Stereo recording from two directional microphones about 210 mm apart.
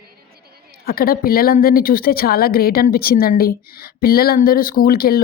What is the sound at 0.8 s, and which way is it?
A woman's voice, 45° left (ahead or behind).